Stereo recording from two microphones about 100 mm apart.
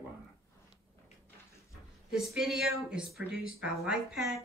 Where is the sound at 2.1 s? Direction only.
5° right (ahead or behind).